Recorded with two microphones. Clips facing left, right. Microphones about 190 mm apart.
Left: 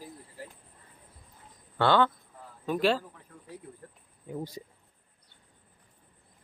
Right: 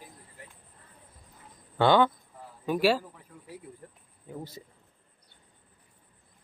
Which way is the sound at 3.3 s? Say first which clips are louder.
Right 1 dB; 5° right (ahead or behind).